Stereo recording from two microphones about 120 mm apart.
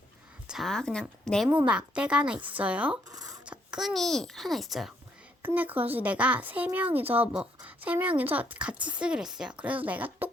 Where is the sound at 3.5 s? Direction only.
5° right (ahead or behind).